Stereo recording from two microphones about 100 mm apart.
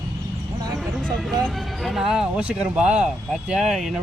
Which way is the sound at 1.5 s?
Centre (ahead or behind).